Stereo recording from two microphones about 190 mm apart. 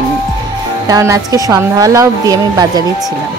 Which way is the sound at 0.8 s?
20° right (ahead or behind).